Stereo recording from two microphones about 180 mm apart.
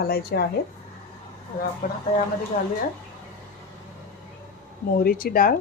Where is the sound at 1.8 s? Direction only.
55° left (ahead or behind).